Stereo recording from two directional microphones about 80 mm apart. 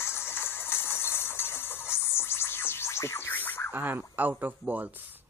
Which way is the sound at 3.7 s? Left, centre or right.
Right.